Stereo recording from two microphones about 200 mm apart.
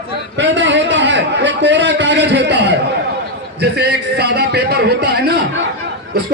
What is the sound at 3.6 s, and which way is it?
A man's voice, 55° right (ahead or behind).